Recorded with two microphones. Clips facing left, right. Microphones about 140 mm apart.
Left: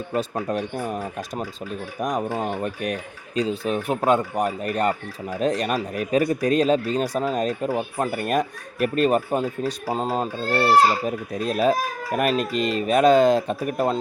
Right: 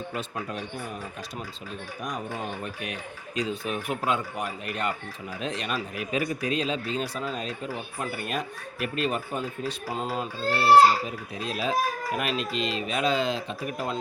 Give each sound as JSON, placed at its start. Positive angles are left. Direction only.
{"t": 0.1, "sound": "speech", "side_deg": 40}
{"t": 0.5, "sound": "speech", "side_deg": 55}
{"t": 2.3, "sound": "speech", "side_deg": 30}
{"t": 2.6, "sound": "speech", "side_deg": 45}
{"t": 3.3, "sound": "speech", "side_deg": 30}
{"t": 4.1, "sound": "speech", "side_deg": 45}
{"t": 8.0, "sound": "speech", "side_deg": 50}
{"t": 9.8, "sound": "speech", "side_deg": 35}
{"t": 10.5, "sound": "speech", "side_deg": 50}